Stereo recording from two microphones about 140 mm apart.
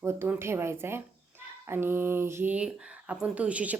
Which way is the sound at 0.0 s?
20° right (ahead or behind).